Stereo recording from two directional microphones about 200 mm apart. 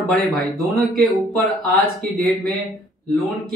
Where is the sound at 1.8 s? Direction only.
50° right (ahead or behind).